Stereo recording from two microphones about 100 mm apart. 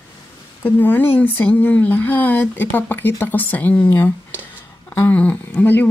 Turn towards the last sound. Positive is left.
turn(degrees=20)  # may be behind; listen again after turning